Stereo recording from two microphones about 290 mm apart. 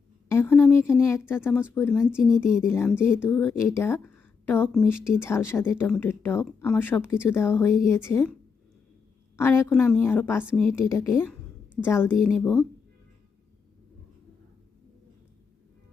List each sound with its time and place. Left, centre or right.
0.3 s a woman's voice: centre
2.6 s speech: centre
9.3 s speech: centre
11.1 s a woman's voice: centre